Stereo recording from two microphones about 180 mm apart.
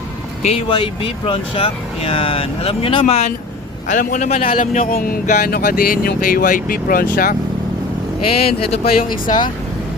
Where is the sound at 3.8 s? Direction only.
45° left (ahead or behind).